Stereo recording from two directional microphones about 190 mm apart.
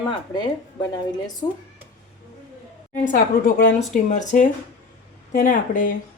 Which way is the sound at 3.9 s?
40° left (ahead or behind).